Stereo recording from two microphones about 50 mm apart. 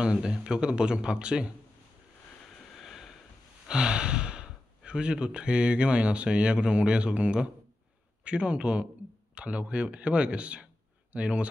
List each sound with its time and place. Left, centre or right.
0.0 s speech: centre
2.7 s a sound: centre
3.6 s speech: centre